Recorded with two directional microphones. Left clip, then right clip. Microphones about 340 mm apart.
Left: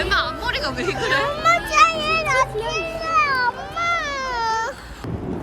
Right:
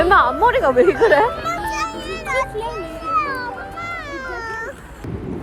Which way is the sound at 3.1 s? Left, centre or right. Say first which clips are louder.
Left 2 dB; centre.